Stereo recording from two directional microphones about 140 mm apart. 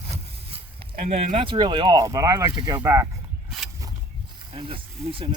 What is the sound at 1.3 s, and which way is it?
Speech, 35° right (ahead or behind).